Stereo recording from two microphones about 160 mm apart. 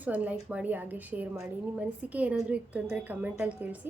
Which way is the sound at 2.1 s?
10° right (ahead or behind).